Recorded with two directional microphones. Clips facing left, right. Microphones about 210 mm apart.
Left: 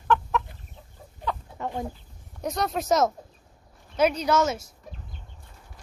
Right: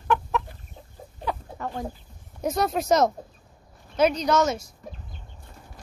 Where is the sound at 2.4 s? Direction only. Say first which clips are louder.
Right 3 dB; centre (ahead or behind).